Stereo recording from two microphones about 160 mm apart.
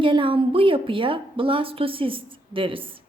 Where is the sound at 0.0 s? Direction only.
30° right (ahead or behind).